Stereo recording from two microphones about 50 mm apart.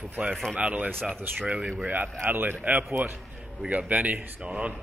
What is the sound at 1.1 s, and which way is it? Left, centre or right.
A man's voice, right.